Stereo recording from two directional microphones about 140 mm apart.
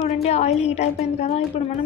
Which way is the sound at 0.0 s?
50° left (ahead or behind).